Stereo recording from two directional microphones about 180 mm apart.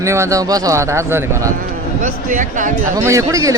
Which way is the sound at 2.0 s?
45° right (ahead or behind).